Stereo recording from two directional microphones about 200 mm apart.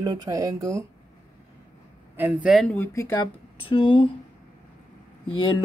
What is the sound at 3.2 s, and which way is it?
Speech, 25° left (ahead or behind).